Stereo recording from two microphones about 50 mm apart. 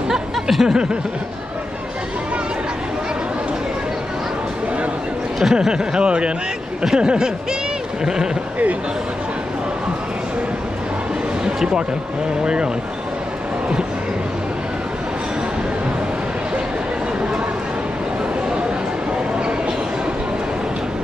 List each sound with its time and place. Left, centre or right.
0.1 s snicker: centre
5.4 s speech: centre
11.4 s a sound: centre